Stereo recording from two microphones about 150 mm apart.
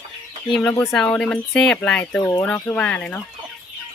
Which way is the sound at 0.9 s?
5° left (ahead or behind).